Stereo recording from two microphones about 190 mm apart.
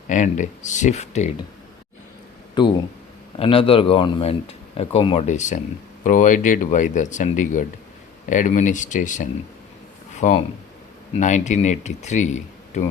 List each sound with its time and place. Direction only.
0.1 s speech: 40° left (ahead or behind)
2.6 s speech: 25° left (ahead or behind); by 12.9 s 40° left (ahead or behind)